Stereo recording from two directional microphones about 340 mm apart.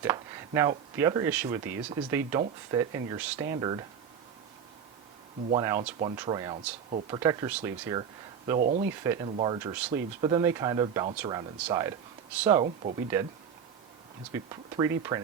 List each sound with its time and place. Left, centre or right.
0.0 s speech: centre
5.5 s speech: centre
8.8 s speech: centre
12.6 s speech: centre
14.3 s speech: centre